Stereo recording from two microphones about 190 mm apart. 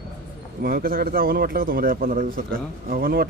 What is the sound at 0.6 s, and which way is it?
A man's voice, 50° right (ahead or behind).